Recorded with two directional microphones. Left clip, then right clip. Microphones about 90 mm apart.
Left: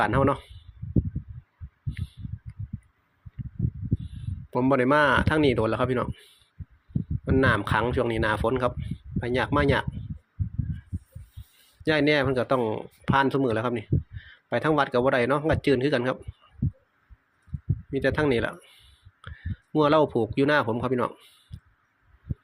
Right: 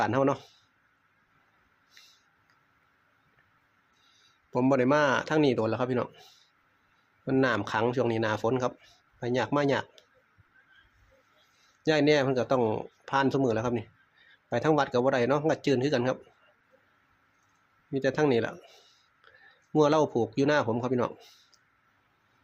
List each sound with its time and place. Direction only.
0.0 s speech: 20° left (ahead or behind)
4.7 s speech: 20° left (ahead or behind)
7.4 s speech: 20° left (ahead or behind)
11.8 s speech: 15° left (ahead or behind)
12.5 s speech: centre (ahead or behind)
13.1 s speech: 15° left (ahead or behind)
17.9 s speech: 20° left (ahead or behind)
19.2 s a sound: 15° left (ahead or behind)
19.7 s speech: 15° left (ahead or behind)
21.5 s crow: 20° left (ahead or behind)